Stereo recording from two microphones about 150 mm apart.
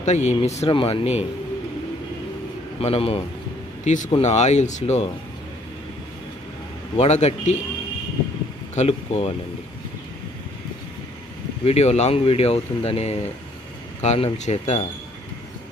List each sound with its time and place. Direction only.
0.0 s speech: 50° left (ahead or behind)
0.7 s speech: 35° left (ahead or behind)
2.8 s speech: 40° left (ahead or behind)
3.8 s speech: 55° left (ahead or behind)
7.0 s speech: 45° left (ahead or behind)
8.7 s speech: 45° left (ahead or behind)
11.6 s speech: 45° left (ahead or behind)